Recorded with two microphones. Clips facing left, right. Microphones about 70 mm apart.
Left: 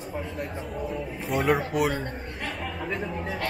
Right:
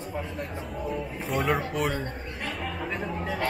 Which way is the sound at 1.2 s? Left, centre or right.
Centre.